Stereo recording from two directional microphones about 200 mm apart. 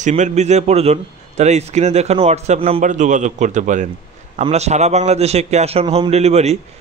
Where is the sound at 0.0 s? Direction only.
35° right (ahead or behind).